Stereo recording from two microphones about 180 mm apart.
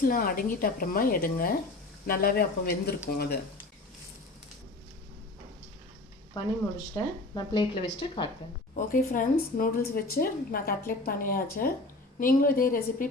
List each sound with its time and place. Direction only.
0.0 s speech: 55° left (ahead or behind)
6.9 s speech: 25° left (ahead or behind)
8.7 s speech: 50° left (ahead or behind)